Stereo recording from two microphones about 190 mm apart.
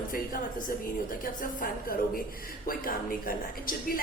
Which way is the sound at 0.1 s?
50° left (ahead or behind).